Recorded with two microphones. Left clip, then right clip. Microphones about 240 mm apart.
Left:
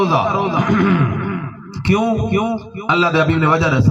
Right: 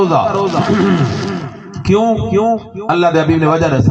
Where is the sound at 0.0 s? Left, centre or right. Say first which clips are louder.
Right 3 dB; left.